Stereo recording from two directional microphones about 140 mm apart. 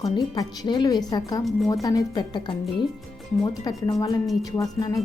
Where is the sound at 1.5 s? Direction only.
Centre (ahead or behind).